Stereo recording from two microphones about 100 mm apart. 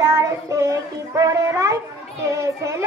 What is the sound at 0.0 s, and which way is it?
A child's voice, 30° right (ahead or behind).